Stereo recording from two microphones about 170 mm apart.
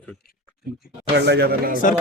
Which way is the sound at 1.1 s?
80° right.